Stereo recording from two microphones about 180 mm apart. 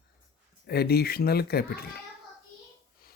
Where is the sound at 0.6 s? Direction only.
60° left (ahead or behind).